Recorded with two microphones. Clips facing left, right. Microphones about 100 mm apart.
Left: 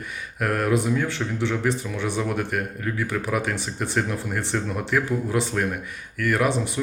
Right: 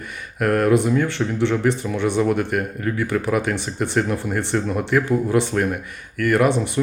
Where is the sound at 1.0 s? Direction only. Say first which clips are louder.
Right 5 dB; 65° right (ahead or behind).